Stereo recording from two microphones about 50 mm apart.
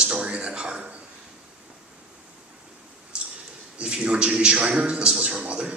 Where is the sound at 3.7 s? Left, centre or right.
Right.